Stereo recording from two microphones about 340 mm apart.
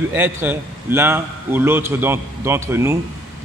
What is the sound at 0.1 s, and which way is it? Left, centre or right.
A man's voice, centre.